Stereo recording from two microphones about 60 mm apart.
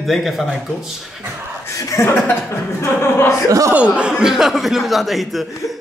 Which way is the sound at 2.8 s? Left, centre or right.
Left.